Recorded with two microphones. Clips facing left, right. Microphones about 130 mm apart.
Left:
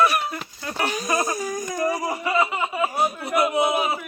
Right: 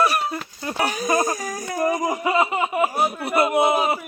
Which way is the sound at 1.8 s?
20° right (ahead or behind).